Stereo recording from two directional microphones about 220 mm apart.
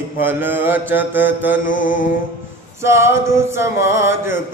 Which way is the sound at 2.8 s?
10° right (ahead or behind).